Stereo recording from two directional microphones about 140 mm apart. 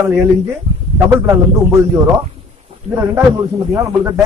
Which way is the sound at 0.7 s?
35° right (ahead or behind).